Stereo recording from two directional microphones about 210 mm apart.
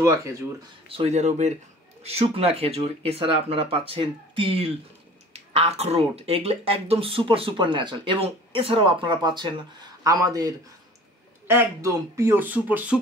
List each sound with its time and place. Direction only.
0.0 s speech: 15° right (ahead or behind)
0.8 s speech: 30° right (ahead or behind); by 13.0 s 5° right (ahead or behind)